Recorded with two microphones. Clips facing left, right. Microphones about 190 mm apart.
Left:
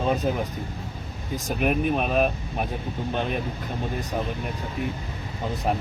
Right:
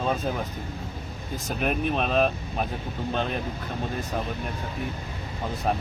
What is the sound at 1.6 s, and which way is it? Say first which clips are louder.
Speech: left 2 dB; 10° left (ahead or behind).